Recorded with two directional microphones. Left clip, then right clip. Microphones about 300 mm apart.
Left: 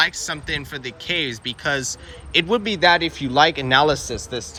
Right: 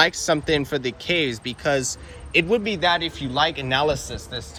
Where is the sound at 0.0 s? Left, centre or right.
Centre.